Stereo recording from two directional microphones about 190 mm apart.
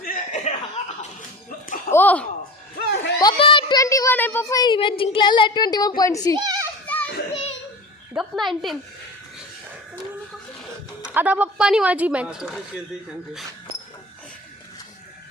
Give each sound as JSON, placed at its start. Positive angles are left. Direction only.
{"t": 0.0, "sound": "chuckle", "side_deg": 45}
{"t": 1.5, "sound": "music", "side_deg": 45}
{"t": 1.9, "sound": "a sound", "side_deg": 10}
{"t": 2.7, "sound": "a sound", "side_deg": 55}
{"t": 3.2, "sound": "child singing", "side_deg": 25}
{"t": 6.0, "sound": "a child's voice", "side_deg": 20}
{"t": 6.3, "sound": "children playing", "side_deg": -20}
{"t": 6.9, "sound": "children playing", "side_deg": 5}
{"t": 8.1, "sound": "speech", "side_deg": 0}
{"t": 11.1, "sound": "speech", "side_deg": -10}